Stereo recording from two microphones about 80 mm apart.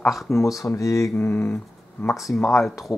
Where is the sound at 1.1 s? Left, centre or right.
Left.